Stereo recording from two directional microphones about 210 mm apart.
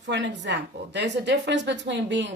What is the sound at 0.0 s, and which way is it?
A woman's voice, 55° right (ahead or behind).